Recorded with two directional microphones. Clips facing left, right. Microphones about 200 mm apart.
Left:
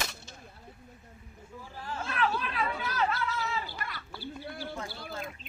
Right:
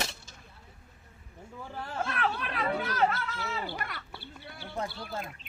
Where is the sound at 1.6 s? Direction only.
60° right (ahead or behind).